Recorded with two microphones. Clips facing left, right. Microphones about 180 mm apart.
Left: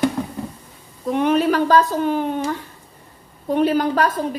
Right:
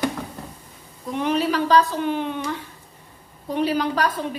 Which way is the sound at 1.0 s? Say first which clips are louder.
Left 5 dB; 55° left (ahead or behind).